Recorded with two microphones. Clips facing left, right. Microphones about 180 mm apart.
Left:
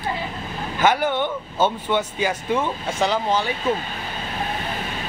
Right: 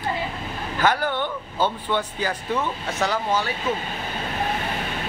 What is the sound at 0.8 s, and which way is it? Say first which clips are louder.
Speech: left 3 dB; 20° left (ahead or behind).